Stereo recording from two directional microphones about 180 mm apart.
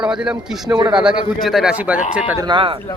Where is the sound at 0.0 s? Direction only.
5° right (ahead or behind).